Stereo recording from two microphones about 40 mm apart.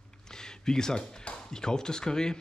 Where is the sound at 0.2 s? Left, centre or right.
Centre.